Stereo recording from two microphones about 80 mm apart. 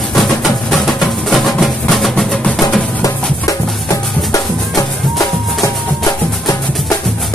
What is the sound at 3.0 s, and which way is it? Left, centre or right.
Music, left.